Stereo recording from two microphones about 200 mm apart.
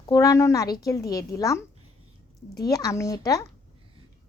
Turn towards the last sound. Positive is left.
turn(degrees=15)  # may be behind; listen again after turning